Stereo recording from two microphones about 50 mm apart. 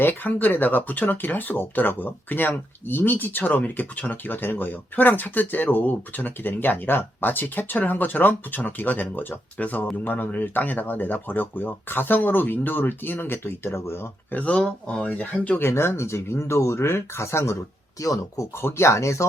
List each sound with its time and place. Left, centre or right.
0.0 s speech: left
14.3 s speech: left
15.1 s speech: left
15.5 s speech: left
18.6 s speech: left